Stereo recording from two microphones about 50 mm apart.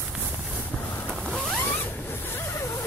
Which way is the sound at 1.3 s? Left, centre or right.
Centre.